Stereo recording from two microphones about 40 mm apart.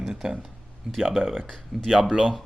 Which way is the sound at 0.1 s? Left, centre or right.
Centre.